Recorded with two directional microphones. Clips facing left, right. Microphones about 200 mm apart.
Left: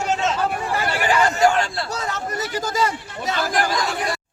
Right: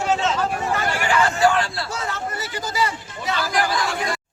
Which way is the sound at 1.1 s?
45° left (ahead or behind).